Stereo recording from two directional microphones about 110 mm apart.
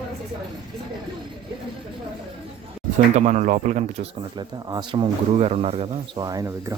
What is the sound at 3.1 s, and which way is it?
Speech, 90° right.